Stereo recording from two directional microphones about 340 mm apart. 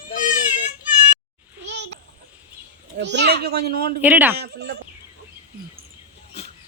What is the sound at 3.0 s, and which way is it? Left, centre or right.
Speech, right.